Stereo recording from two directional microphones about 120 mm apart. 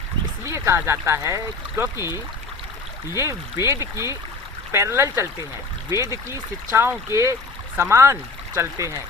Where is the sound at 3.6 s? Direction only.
25° right (ahead or behind).